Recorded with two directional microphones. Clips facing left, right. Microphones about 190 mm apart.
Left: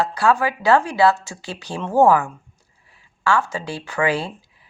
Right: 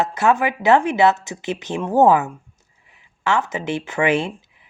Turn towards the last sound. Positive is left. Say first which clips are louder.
# right 2 dB
turn(degrees=-20)  # may be behind; listen again after turning